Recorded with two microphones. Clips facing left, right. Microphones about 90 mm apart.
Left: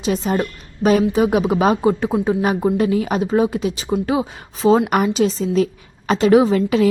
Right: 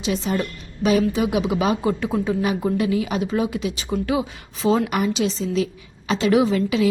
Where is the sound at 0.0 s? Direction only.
40° left (ahead or behind).